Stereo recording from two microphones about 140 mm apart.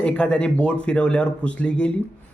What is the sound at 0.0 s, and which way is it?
Speech, 10° left (ahead or behind).